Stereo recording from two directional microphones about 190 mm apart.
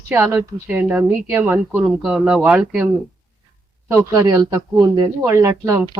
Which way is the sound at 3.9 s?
15° right (ahead or behind).